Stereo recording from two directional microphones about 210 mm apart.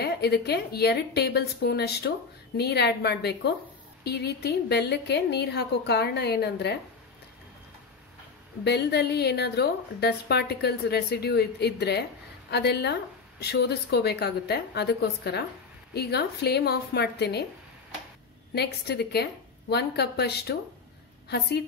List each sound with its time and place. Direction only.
0.0 s a woman's voice: 50° left (ahead or behind)
8.6 s a woman's voice: 50° left (ahead or behind)
18.5 s a woman's voice: 50° left (ahead or behind)